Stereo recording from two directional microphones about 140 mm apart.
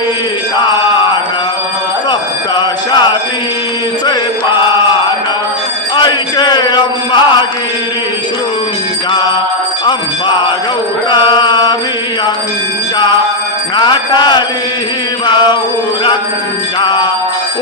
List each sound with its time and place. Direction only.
0.6 s mantra: 35° left (ahead or behind)
2.6 s music: 30° left (ahead or behind)
6.0 s a sound: 30° left (ahead or behind)
11.1 s mantra: 35° left (ahead or behind)
13.7 s mantra: 35° left (ahead or behind)